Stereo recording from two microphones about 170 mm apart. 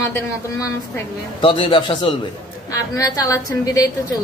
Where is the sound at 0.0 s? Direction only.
15° left (ahead or behind).